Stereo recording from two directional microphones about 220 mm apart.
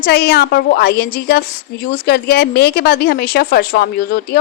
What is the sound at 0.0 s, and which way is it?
A woman's voice, 45° left (ahead or behind).